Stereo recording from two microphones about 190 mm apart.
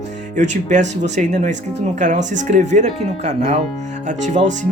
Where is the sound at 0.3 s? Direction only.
40° right (ahead or behind).